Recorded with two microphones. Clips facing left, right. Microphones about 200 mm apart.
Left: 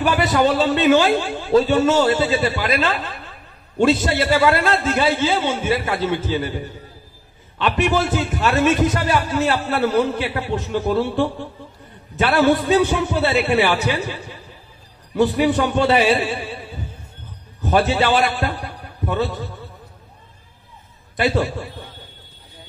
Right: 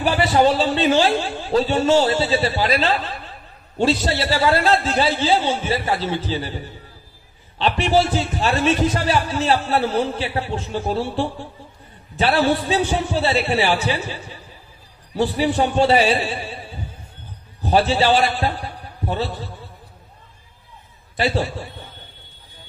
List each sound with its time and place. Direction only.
0.0 s a sound: 50° left (ahead or behind)
0.5 s a man's voice: 55° left (ahead or behind)
7.5 s a man's voice: 50° left (ahead or behind)
15.1 s a man's voice: 50° left (ahead or behind)
17.6 s a man's voice: 50° left (ahead or behind)